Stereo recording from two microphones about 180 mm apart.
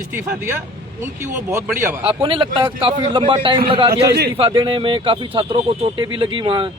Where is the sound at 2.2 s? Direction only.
30° right (ahead or behind).